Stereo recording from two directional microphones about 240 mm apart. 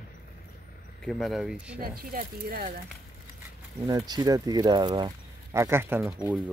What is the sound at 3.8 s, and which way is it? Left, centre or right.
Speech, centre.